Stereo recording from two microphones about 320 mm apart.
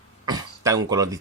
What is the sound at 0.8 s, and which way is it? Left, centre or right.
Speech, centre.